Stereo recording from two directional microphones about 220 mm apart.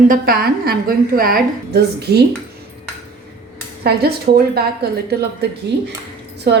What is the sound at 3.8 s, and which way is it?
Speech, 45° right (ahead or behind).